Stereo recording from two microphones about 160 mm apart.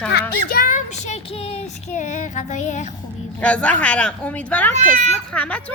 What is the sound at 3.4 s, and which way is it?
A woman's voice, 10° left (ahead or behind).